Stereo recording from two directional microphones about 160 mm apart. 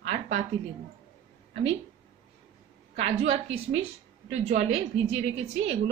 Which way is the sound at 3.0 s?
45° right (ahead or behind).